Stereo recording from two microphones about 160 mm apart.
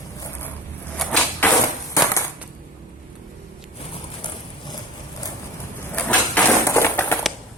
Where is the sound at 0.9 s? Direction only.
5° left (ahead or behind).